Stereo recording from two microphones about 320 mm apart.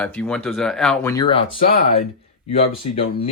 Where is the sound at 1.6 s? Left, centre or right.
Left.